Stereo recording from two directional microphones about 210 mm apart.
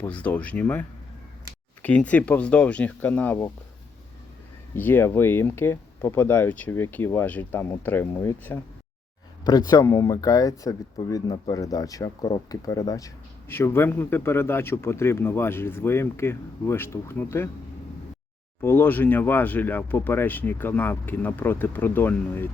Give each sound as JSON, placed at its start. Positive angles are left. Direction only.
{"t": 0.0, "sound": "speech", "side_deg": 5}
{"t": 4.7, "sound": "speech", "side_deg": 10}
{"t": 18.6, "sound": "speech", "side_deg": 10}